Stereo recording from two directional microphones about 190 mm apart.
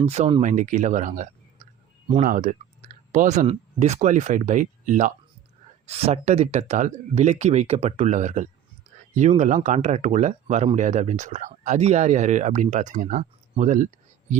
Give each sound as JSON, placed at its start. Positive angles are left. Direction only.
{"t": 0.0, "sound": "speech", "side_deg": -35}
{"t": 0.4, "sound": "speech", "side_deg": -40}